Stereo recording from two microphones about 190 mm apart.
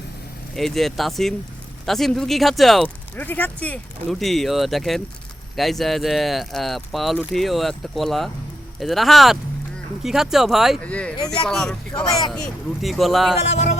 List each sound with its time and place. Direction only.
0.5 s speech: centre (ahead or behind)
13.5 s music: 35° left (ahead or behind)